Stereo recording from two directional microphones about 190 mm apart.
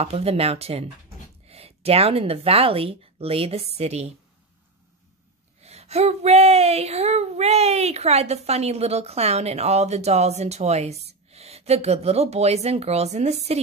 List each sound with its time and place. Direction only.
0.0 s speech: 30° right (ahead or behind)
5.6 s speech: 35° right (ahead or behind)